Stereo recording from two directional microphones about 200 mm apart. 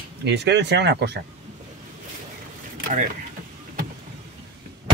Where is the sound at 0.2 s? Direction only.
60° right (ahead or behind).